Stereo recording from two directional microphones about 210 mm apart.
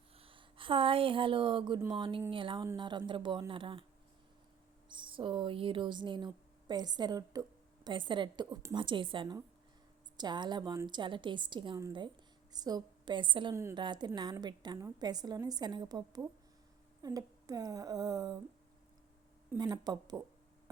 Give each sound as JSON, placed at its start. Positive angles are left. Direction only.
{"t": 0.2, "sound": "a woman's voice", "side_deg": -25}
{"t": 4.9, "sound": "a woman's voice", "side_deg": -25}
{"t": 19.5, "sound": "a woman's voice", "side_deg": -20}